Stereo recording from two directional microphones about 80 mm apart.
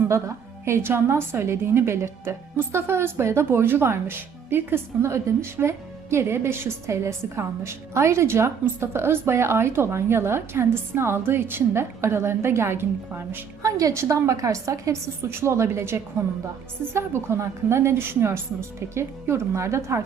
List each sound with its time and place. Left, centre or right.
0.1 s a woman's voice: right
13.6 s a woman's voice: right